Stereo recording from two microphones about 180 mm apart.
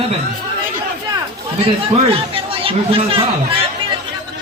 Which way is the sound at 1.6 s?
30° right (ahead or behind).